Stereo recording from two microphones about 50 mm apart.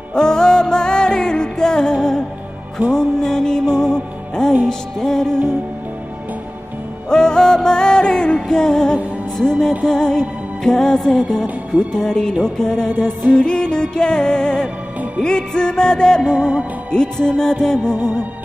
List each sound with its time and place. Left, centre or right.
0.1 s music: centre
7.1 s music: centre
11.4 s music: right
11.9 s music: centre
17.9 s music: right